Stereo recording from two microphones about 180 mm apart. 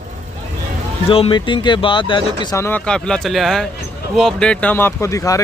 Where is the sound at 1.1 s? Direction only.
30° left (ahead or behind).